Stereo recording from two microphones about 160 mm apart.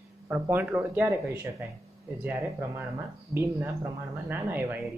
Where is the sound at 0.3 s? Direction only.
10° right (ahead or behind).